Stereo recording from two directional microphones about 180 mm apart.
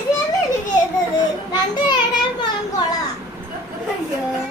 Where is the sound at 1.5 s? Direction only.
25° left (ahead or behind).